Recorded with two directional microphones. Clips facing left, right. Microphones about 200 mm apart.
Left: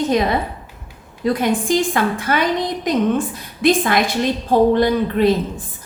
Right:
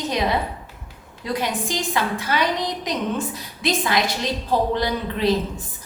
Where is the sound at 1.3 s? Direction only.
50° left (ahead or behind).